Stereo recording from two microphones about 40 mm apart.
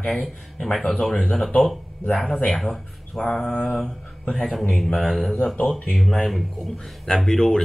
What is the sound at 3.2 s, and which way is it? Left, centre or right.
Speech, centre.